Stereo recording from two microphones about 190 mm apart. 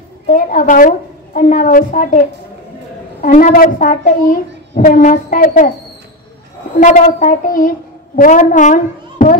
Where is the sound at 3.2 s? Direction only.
45° left (ahead or behind).